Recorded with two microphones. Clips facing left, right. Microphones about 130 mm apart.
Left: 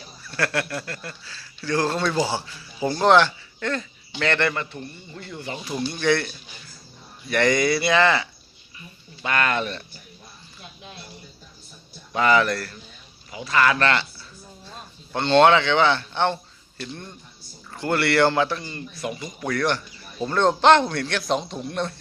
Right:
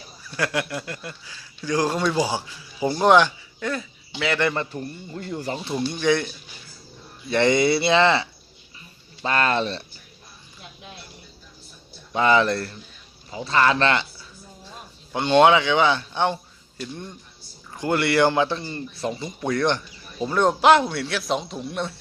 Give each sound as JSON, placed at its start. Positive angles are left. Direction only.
{"t": 0.3, "sound": "speech", "side_deg": -15}
{"t": 4.5, "sound": "speech", "side_deg": -35}
{"t": 5.9, "sound": "speech", "side_deg": -15}
{"t": 12.1, "sound": "a man's voice", "side_deg": -20}